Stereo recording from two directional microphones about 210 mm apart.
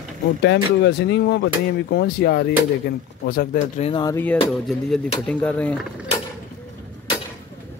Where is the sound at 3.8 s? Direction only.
20° left (ahead or behind).